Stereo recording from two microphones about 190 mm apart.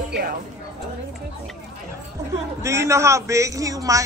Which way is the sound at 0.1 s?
50° right (ahead or behind).